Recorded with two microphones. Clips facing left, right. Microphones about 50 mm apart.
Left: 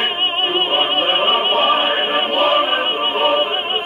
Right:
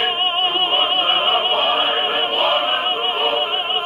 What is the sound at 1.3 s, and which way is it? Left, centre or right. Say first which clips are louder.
Opera: left 2 dB; centre.